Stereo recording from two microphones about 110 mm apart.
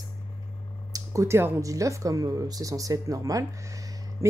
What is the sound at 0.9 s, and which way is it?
Speech, 25° right (ahead or behind).